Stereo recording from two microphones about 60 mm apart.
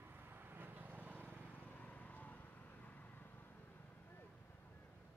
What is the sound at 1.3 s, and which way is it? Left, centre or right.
Vehicle, left.